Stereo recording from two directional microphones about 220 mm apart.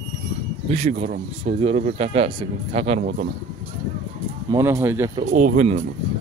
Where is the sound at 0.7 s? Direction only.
30° right (ahead or behind).